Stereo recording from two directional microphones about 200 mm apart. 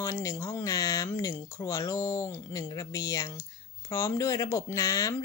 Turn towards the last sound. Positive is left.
turn(degrees=15)  # may be behind; listen again after turning